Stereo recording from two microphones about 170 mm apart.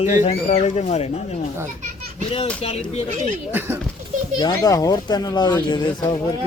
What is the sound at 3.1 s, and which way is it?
Speech, 45° right (ahead or behind).